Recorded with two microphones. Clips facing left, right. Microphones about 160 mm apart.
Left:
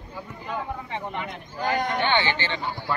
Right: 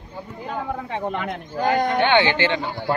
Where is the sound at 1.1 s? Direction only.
60° right (ahead or behind).